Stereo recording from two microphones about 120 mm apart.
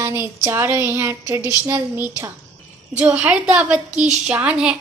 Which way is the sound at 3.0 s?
10° right (ahead or behind).